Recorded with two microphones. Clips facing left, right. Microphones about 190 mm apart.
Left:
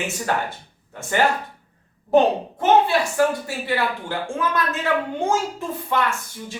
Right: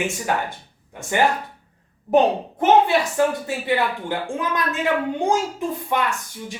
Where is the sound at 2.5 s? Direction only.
20° right (ahead or behind).